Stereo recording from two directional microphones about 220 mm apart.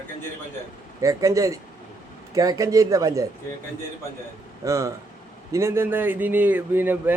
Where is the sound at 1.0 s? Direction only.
15° right (ahead or behind).